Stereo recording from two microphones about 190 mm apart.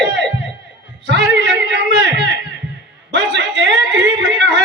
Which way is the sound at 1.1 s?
65° right (ahead or behind).